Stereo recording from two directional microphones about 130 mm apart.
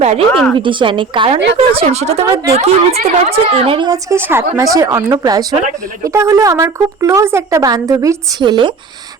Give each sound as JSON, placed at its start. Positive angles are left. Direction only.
{"t": 0.0, "sound": "speech", "side_deg": -55}
{"t": 0.5, "sound": "a woman's voice", "side_deg": -40}
{"t": 3.8, "sound": "a woman's voice", "side_deg": -25}